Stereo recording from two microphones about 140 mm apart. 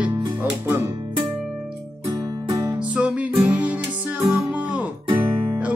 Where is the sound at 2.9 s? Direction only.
10° right (ahead or behind).